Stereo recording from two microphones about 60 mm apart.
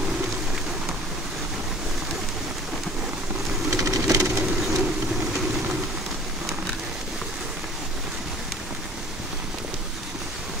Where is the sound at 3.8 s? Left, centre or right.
Right.